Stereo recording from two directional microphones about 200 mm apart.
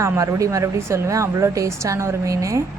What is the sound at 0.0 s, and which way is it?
A woman's voice, 15° right (ahead or behind).